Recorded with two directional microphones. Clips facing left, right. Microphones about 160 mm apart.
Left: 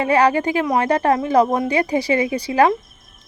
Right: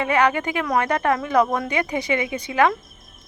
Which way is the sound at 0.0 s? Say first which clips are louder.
Left 4 dB; 35° left (ahead or behind).